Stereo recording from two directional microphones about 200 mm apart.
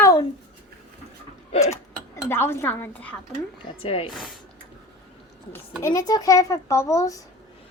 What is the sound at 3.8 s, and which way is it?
Speech, 30° left (ahead or behind).